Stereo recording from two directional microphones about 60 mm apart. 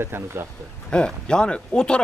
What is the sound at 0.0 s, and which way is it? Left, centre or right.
Speech, right.